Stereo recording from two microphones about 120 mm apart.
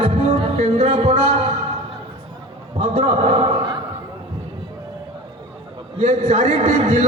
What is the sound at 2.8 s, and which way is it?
Speech, 60° right (ahead or behind).